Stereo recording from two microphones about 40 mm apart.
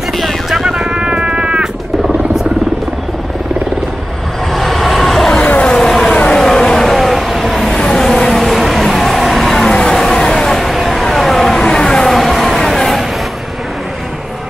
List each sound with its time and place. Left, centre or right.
0.2 s music: centre
0.8 s music: right
4.5 s vehicle: centre
5.6 s vehicle: left
5.9 s vehicle: centre
7.0 s vehicle: centre
7.7 s vehicle: centre
8.2 s vehicle: centre
11.6 s vehicle: centre
12.1 s vehicle: centre